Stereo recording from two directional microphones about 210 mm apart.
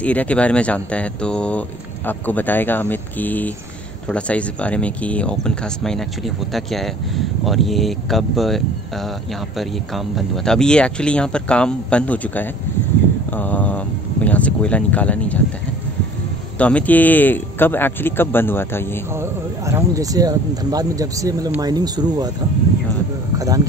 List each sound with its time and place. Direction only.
0.0 s a man's voice: 5° left (ahead or behind)
16.5 s a man's voice: 5° left (ahead or behind)
19.1 s speech: 15° right (ahead or behind)
23.3 s speech: 15° right (ahead or behind)